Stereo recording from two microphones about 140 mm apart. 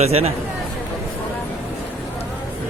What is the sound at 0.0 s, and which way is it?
Speech, 50° right (ahead or behind).